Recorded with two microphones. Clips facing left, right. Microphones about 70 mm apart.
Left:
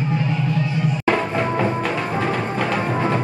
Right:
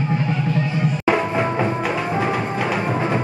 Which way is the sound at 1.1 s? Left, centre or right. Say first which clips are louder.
Right 1 dB; centre.